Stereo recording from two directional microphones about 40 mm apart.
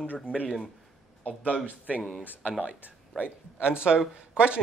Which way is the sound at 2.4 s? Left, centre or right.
Right.